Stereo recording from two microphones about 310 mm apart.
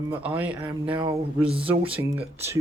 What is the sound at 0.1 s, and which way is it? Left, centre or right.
Speech, centre.